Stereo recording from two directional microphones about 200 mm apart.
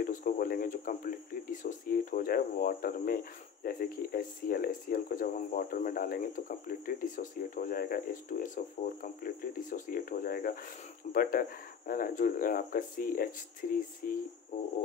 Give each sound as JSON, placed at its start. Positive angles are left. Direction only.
{"t": 0.0, "sound": "speech", "side_deg": 40}